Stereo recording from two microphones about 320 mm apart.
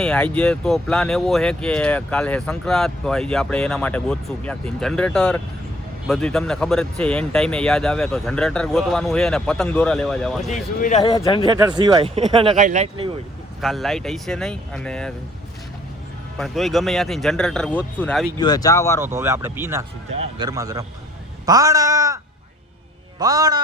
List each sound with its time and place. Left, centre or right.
0.0 s speech: centre
10.5 s speech: left
11.4 s speech: centre
13.6 s speech: centre
16.4 s speech: centre
18.3 s speech: centre
19.0 s speech: centre